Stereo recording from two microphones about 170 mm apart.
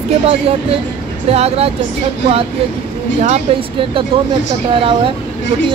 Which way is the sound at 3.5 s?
35° right (ahead or behind).